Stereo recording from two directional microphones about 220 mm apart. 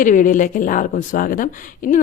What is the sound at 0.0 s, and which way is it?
Speech, 35° left (ahead or behind).